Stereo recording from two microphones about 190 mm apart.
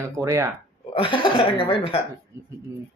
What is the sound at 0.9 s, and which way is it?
Speech, 25° left (ahead or behind).